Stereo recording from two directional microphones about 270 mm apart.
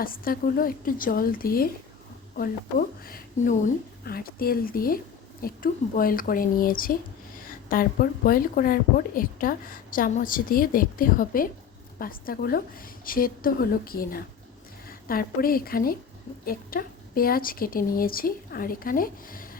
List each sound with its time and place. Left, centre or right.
0.0 s a woman's voice: left